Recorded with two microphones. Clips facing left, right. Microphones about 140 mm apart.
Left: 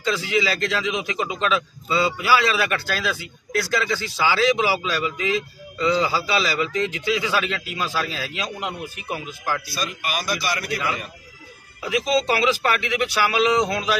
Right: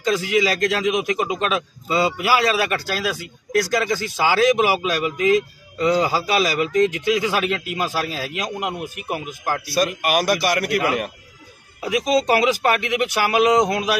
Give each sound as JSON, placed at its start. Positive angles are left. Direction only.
{"t": 0.0, "sound": "speech", "side_deg": -45}
{"t": 9.8, "sound": "a man's voice", "side_deg": -65}
{"t": 11.8, "sound": "speech", "side_deg": -45}
{"t": 13.6, "sound": "a man's voice", "side_deg": -20}